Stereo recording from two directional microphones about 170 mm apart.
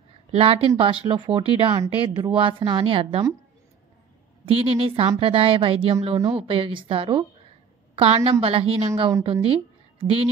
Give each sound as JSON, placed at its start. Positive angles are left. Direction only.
{"t": 0.3, "sound": "a woman's voice", "side_deg": -35}
{"t": 4.5, "sound": "a woman's voice", "side_deg": -35}